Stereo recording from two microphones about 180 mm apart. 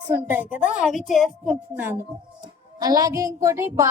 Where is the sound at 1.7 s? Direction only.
10° right (ahead or behind).